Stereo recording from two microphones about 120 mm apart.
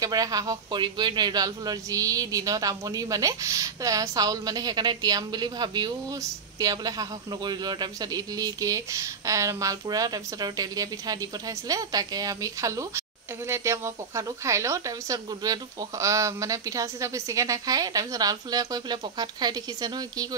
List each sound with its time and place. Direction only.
0.0 s a man's voice: 30° right (ahead or behind)